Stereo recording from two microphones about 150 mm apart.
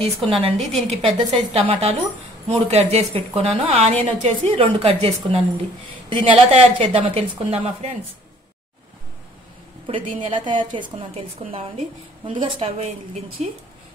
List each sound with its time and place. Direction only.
0.6 s a woman's voice: centre (ahead or behind)
0.8 s a woman's voice: 40° right (ahead or behind)
9.8 s a woman's voice: 35° right (ahead or behind)
12.3 s a woman's voice: 35° right (ahead or behind)